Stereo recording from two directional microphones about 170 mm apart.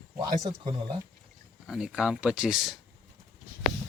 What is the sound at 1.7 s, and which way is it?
Speech, 5° right (ahead or behind).